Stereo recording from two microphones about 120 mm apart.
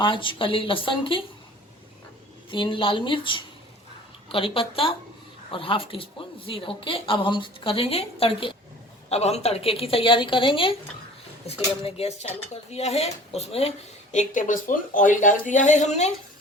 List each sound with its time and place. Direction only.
0.0 s a woman's voice: 45° left (ahead or behind)
2.5 s a woman's voice: 45° left (ahead or behind)
9.0 s a woman's voice: 60° left (ahead or behind)